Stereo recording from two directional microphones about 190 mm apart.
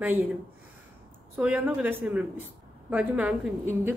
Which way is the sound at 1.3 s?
10° right (ahead or behind).